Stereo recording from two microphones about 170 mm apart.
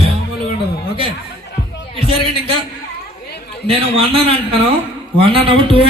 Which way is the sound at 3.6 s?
35° right (ahead or behind).